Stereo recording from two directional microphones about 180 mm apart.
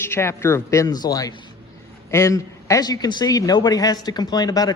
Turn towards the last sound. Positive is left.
turn(degrees=20)  # may be behind; listen again after turning